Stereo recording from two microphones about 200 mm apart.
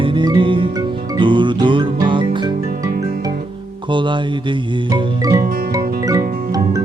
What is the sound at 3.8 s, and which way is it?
Music, 25° right (ahead or behind).